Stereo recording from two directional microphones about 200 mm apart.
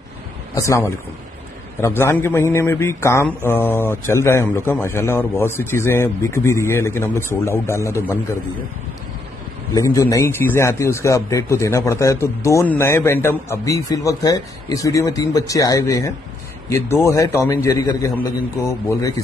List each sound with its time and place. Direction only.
0.6 s a man's voice: 15° left (ahead or behind)
9.8 s a man's voice: 15° left (ahead or behind)